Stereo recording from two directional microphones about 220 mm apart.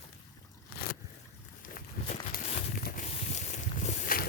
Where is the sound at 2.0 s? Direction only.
30° left (ahead or behind).